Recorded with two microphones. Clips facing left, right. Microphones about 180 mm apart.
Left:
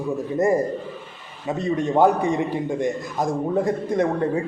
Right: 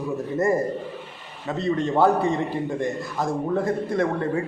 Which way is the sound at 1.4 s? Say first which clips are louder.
Left 1 dB; 15° left (ahead or behind).